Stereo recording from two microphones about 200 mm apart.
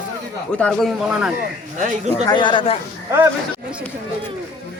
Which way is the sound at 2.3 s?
25° left (ahead or behind).